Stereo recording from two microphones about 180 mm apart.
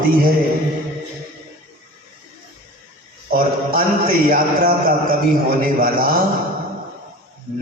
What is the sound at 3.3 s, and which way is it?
A man's voice, 50° right (ahead or behind).